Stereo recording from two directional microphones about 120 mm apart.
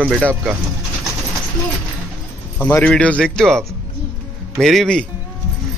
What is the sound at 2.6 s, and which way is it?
A man's voice, 15° left (ahead or behind).